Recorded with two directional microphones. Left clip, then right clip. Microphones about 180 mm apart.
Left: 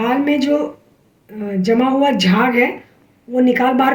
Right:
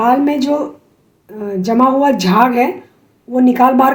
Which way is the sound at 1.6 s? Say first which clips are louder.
Right 3 dB; 40° right (ahead or behind).